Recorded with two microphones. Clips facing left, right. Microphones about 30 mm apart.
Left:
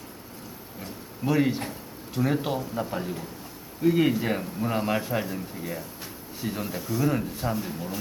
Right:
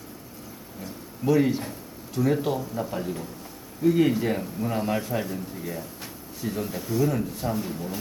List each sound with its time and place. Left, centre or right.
1.2 s speech: centre
2.9 s speech: centre
7.5 s speech: centre